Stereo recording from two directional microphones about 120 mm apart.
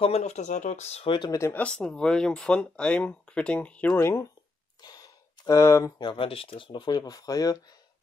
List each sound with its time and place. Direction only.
0.0 s speech: 65° left (ahead or behind)
1.0 s speech: 40° left (ahead or behind)
1.3 s speech: 25° left (ahead or behind)
1.6 s speech: 10° left (ahead or behind)
4.0 s speech: 25° left (ahead or behind)
4.8 s a sound: 35° left (ahead or behind)
5.9 s speech: 45° left (ahead or behind)